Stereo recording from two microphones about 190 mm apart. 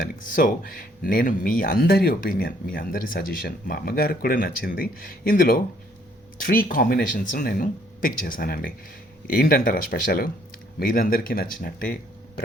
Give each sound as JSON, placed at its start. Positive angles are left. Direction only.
{"t": 0.0, "sound": "speech", "side_deg": 45}